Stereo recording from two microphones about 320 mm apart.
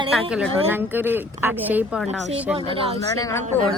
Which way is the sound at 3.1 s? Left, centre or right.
Centre.